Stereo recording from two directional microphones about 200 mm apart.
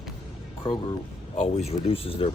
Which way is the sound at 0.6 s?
25° left (ahead or behind).